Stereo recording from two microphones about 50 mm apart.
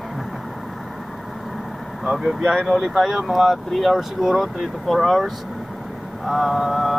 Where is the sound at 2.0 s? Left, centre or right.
Centre.